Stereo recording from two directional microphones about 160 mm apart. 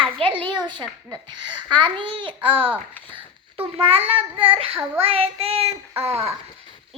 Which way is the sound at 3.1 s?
35° right (ahead or behind).